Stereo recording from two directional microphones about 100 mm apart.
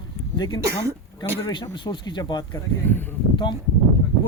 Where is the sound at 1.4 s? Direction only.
55° left (ahead or behind).